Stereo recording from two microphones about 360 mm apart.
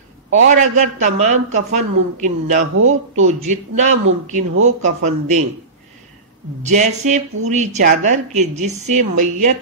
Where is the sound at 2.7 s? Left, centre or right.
Right.